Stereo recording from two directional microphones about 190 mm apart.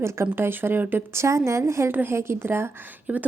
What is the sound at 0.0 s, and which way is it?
A woman's voice, 15° right (ahead or behind).